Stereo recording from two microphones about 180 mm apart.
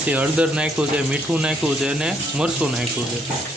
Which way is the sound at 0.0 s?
10° right (ahead or behind).